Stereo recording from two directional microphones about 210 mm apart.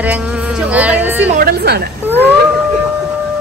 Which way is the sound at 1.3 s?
50° right (ahead or behind).